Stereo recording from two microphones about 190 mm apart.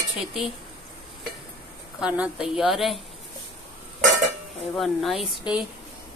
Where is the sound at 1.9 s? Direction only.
5° right (ahead or behind).